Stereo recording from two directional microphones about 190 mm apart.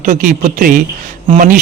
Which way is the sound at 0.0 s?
45° right (ahead or behind).